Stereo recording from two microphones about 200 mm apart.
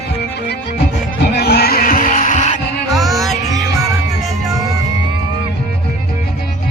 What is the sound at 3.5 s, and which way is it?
Music, 15° right (ahead or behind).